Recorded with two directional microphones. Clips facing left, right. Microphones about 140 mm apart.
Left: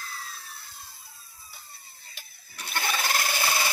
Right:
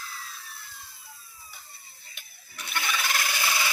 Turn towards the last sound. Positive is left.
turn(degrees=35)  # may be behind; listen again after turning